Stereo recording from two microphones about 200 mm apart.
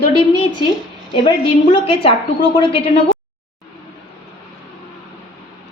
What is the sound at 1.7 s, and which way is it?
Speech, 25° left (ahead or behind).